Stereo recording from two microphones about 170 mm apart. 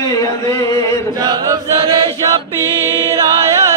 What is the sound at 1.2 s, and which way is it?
Chant, 20° right (ahead or behind).